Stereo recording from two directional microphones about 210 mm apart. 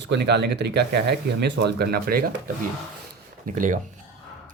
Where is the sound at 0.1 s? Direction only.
55° right (ahead or behind).